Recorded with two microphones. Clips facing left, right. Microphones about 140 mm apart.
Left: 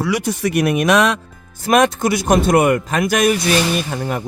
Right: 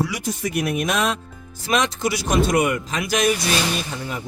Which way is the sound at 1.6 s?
55° left (ahead or behind).